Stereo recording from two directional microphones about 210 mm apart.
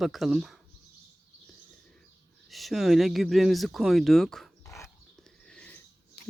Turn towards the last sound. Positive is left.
turn(degrees=5)  # may be behind; listen again after turning